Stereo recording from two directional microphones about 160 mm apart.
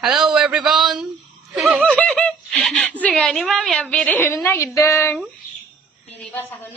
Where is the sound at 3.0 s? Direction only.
5° left (ahead or behind).